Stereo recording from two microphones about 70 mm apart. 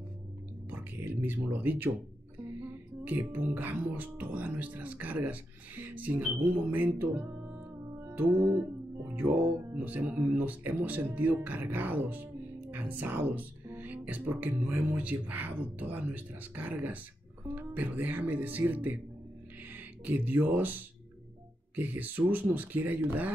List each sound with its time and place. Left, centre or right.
1.2 s music: right
7.0 s speech: right
8.1 s music: right
19.7 s speech: right
21.7 s music: right